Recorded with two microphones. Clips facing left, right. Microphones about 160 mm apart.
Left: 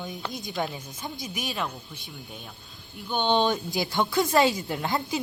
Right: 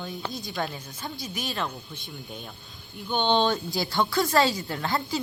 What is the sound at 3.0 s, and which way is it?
A woman's voice, 10° left (ahead or behind).